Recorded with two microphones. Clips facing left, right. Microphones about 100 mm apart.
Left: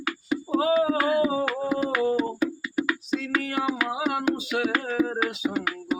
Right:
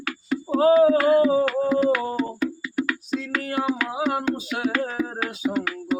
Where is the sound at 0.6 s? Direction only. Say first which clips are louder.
Right 8 dB; 40° right (ahead or behind).